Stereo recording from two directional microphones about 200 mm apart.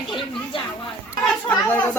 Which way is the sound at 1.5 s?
10° left (ahead or behind).